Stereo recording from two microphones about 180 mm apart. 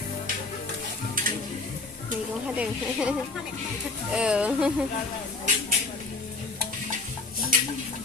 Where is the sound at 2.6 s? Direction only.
5° right (ahead or behind).